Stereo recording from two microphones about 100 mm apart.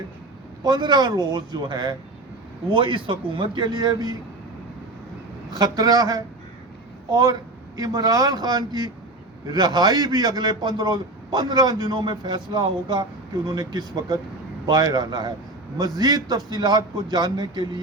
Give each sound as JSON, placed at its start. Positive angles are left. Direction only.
{"t": 0.6, "sound": "a man's voice", "side_deg": -45}
{"t": 3.8, "sound": "a man's voice", "side_deg": -40}
{"t": 5.5, "sound": "a man's voice", "side_deg": -40}